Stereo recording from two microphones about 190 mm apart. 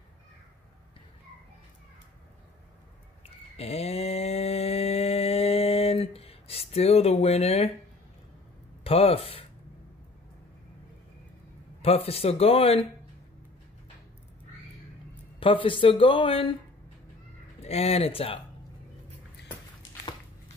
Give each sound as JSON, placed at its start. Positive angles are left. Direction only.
{"t": 3.5, "sound": "mantra", "side_deg": 30}
{"t": 8.8, "sound": "speech", "side_deg": 30}
{"t": 11.8, "sound": "speech", "side_deg": 30}
{"t": 15.4, "sound": "speech", "side_deg": 30}
{"t": 17.6, "sound": "speech", "side_deg": 35}
{"t": 19.4, "sound": "a sound", "side_deg": 20}